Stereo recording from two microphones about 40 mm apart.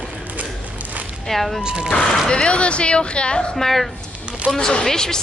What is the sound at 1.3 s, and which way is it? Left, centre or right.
Speech, centre.